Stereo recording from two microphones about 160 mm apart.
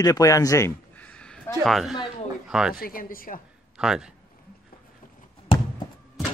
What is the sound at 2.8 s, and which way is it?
Speech, 60° left (ahead or behind).